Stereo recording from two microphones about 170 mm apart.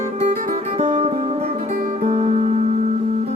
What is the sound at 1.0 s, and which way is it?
Music, 35° right (ahead or behind).